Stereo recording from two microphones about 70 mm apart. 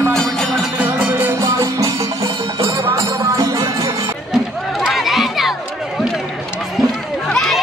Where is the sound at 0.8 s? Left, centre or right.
Right.